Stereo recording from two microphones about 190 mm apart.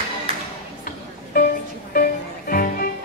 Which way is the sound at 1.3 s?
50° left (ahead or behind).